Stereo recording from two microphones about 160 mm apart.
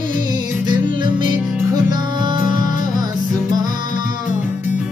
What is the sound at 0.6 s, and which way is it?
Music, 30° right (ahead or behind).